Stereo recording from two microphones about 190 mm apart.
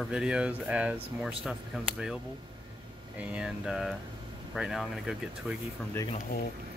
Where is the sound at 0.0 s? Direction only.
5° right (ahead or behind).